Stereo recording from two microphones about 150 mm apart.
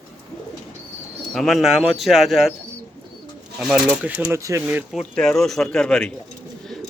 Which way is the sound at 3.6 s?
5° right (ahead or behind).